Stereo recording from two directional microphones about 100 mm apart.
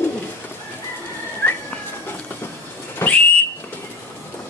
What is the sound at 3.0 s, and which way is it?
Whistle, 25° left (ahead or behind).